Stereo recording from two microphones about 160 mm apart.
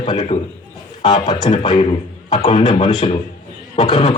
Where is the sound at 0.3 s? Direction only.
45° left (ahead or behind).